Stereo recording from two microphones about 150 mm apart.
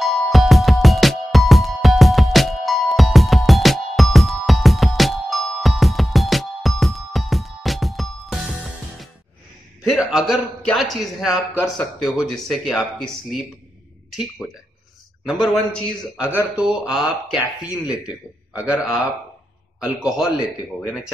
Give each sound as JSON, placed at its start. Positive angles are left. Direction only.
{"t": 0.0, "sound": "music", "side_deg": 0}
{"t": 9.8, "sound": "a man's voice", "side_deg": -5}
{"t": 15.2, "sound": "a man's voice", "side_deg": 0}
{"t": 16.2, "sound": "speech", "side_deg": -10}
{"t": 19.8, "sound": "a man's voice", "side_deg": -5}